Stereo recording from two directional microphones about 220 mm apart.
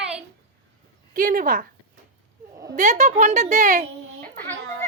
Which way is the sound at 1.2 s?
40° right (ahead or behind).